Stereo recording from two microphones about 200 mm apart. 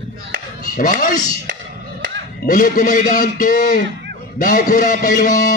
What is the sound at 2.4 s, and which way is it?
A man's voice, 45° left (ahead or behind).